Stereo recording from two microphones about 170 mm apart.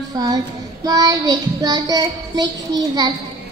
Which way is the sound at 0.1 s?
20° right (ahead or behind).